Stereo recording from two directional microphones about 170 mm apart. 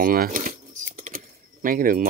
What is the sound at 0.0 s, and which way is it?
Speech, 55° right (ahead or behind).